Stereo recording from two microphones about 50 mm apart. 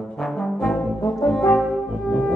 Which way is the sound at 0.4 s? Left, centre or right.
Centre.